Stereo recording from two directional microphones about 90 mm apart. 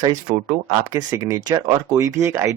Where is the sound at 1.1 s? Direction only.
35° right (ahead or behind).